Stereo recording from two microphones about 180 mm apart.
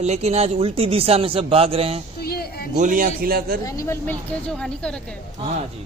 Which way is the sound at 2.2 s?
60° left (ahead or behind).